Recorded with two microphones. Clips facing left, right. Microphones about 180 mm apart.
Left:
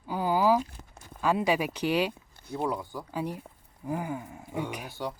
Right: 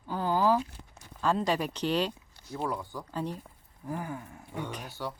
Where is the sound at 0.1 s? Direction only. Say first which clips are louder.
Left 2 dB; 10° left (ahead or behind).